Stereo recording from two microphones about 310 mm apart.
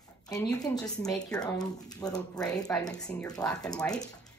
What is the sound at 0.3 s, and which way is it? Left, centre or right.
A woman's voice, centre.